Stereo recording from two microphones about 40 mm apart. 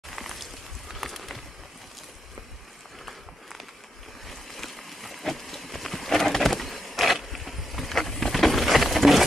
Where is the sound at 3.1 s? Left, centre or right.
Centre.